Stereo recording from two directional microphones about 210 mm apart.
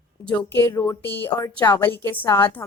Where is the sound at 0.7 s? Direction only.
15° left (ahead or behind).